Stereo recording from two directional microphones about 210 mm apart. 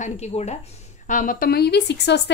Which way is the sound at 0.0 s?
30° left (ahead or behind).